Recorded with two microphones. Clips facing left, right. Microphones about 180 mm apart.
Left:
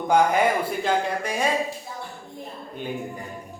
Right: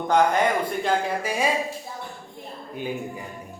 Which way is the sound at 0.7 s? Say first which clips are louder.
Even; centre (ahead or behind).